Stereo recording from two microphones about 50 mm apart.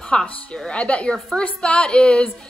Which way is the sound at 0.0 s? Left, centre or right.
Centre.